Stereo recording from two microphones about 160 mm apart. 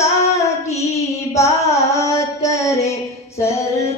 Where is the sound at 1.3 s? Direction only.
20° left (ahead or behind).